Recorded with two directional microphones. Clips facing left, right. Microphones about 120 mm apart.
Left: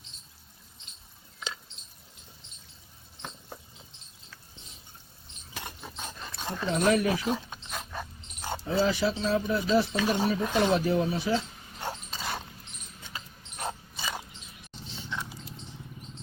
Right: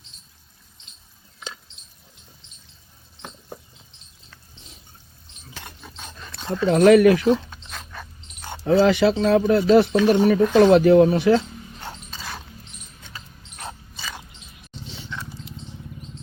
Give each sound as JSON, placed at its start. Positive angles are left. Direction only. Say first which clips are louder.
{"t": 3.2, "sound": "a sound", "louder": "right 4 dB", "side_deg": -10}
{"t": 6.7, "sound": "speech", "louder": "right 12 dB", "side_deg": -70}
{"t": 7.5, "sound": "dog", "louder": "left 1 dB", "side_deg": 15}
{"t": 8.6, "sound": "speech", "louder": "right 10 dB", "side_deg": -65}
{"t": 11.8, "sound": "a sound", "louder": "left 4 dB", "side_deg": 15}
{"t": 13.6, "sound": "mechanisms", "louder": "left 1 dB", "side_deg": 15}